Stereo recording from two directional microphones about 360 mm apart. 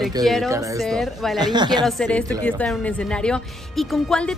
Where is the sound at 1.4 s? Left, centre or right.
Centre.